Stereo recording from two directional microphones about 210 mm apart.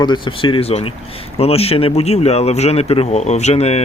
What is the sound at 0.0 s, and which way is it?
Speech, 20° left (ahead or behind).